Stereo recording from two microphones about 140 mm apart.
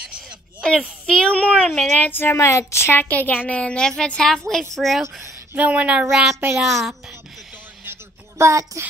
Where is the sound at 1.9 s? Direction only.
15° left (ahead or behind).